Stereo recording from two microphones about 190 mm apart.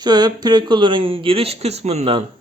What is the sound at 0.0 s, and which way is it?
Speech, 20° right (ahead or behind).